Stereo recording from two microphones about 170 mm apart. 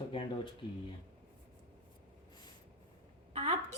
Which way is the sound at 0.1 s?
30° left (ahead or behind).